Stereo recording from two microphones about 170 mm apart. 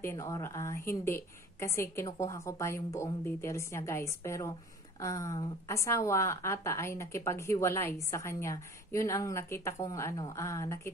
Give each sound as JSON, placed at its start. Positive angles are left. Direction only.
{"t": 0.0, "sound": "a woman's voice", "side_deg": 15}